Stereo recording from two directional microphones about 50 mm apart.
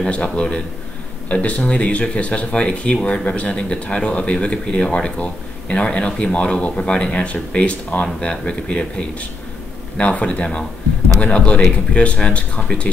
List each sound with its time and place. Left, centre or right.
0.0 s speech: left